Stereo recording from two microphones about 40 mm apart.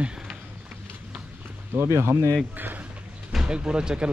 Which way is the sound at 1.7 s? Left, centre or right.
Right.